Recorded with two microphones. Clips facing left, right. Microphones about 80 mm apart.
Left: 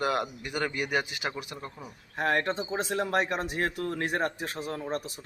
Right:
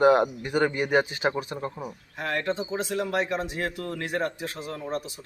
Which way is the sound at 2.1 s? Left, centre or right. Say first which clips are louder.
Left 1 dB; left.